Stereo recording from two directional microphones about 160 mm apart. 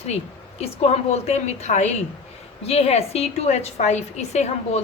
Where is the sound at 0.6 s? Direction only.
40° left (ahead or behind).